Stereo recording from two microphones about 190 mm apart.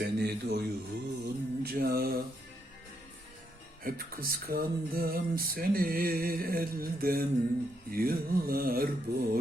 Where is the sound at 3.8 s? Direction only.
50° right (ahead or behind).